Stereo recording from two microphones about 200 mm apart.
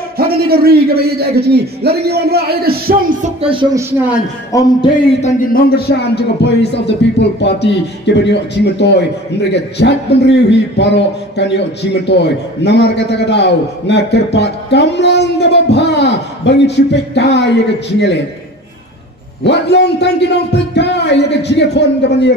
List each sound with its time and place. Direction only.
0.2 s a man's voice: 50° right (ahead or behind); by 3.6 s 30° right (ahead or behind)
4.5 s speech: 15° left (ahead or behind)
5.2 s a man's voice: 45° left (ahead or behind)
19.4 s a man's voice: 60° left (ahead or behind)